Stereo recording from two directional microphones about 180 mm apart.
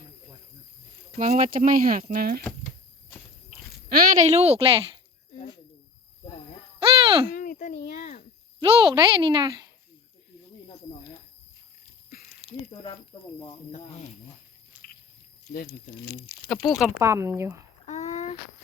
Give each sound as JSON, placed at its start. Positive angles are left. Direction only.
{"t": 1.1, "sound": "speech", "side_deg": -40}
{"t": 3.8, "sound": "a woman's voice", "side_deg": -50}
{"t": 6.7, "sound": "hoot", "side_deg": -30}
{"t": 7.3, "sound": "a child's voice", "side_deg": 50}
{"t": 8.6, "sound": "speech", "side_deg": -25}
{"t": 12.4, "sound": "a sound", "side_deg": -35}
{"t": 13.5, "sound": "speech", "side_deg": 35}
{"t": 14.7, "sound": "biting", "side_deg": -10}
{"t": 16.5, "sound": "speech", "side_deg": 0}
{"t": 17.0, "sound": "speech", "side_deg": -15}
{"t": 17.8, "sound": "a sound", "side_deg": 40}